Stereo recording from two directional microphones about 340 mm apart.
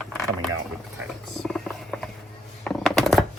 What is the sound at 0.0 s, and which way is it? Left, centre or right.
Vehicle, centre.